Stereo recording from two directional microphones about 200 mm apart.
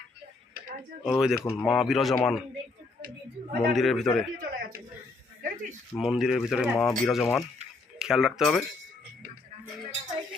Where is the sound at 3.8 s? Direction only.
Centre (ahead or behind).